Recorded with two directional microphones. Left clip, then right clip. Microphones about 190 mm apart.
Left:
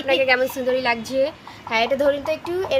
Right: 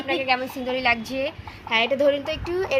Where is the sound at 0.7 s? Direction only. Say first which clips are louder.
Right 1 dB; 10° left (ahead or behind).